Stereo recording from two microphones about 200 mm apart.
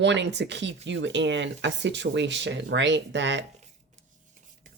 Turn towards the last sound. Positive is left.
turn(degrees=-40)  # may be behind; listen again after turning